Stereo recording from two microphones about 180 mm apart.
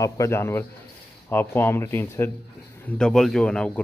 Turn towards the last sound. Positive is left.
turn(degrees=5)  # may be behind; listen again after turning